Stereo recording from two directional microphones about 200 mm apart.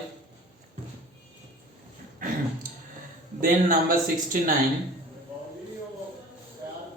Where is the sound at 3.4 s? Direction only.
45° right (ahead or behind).